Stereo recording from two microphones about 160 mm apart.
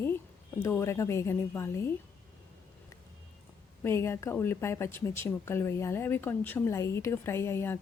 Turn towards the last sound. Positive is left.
turn(degrees=15)  # may be behind; listen again after turning